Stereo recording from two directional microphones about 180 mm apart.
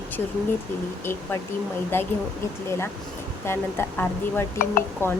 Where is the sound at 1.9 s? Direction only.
10° left (ahead or behind).